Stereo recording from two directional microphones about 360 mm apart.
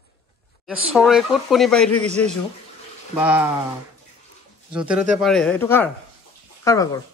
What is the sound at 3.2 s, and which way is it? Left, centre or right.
Speech, centre.